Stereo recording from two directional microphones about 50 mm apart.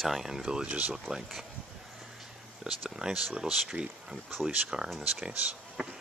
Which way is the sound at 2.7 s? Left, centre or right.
Centre.